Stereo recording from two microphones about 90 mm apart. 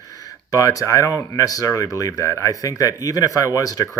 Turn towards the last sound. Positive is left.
turn(degrees=40)  # may be behind; listen again after turning